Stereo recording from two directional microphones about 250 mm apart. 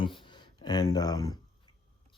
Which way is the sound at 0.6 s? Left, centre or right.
Centre.